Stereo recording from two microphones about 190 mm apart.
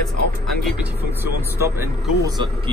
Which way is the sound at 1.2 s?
15° right (ahead or behind).